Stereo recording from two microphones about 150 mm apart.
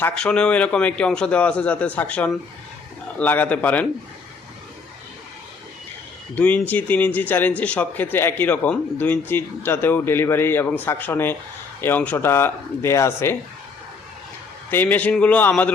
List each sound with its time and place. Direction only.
0.0 s speech: 5° left (ahead or behind)
6.3 s speech: 10° left (ahead or behind)
14.7 s speech: 10° left (ahead or behind)